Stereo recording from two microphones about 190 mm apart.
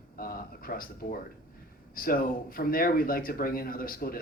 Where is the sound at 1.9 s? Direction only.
50° left (ahead or behind).